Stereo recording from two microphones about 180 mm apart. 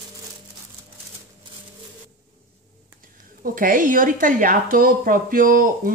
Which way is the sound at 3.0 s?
50° right (ahead or behind).